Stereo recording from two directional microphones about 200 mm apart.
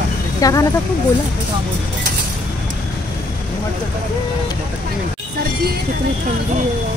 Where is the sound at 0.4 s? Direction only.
15° left (ahead or behind).